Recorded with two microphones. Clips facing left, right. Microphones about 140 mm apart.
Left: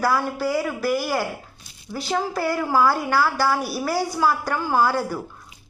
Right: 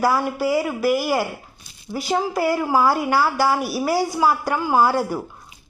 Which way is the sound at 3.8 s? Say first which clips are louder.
Right 3 dB; 15° right (ahead or behind).